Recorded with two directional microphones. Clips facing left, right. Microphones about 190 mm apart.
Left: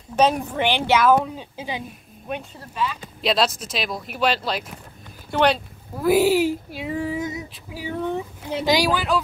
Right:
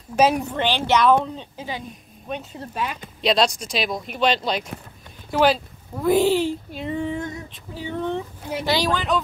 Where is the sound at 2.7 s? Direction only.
50° right (ahead or behind).